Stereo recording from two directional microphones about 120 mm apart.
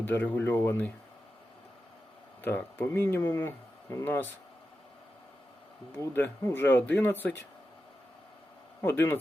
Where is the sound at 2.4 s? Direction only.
20° left (ahead or behind).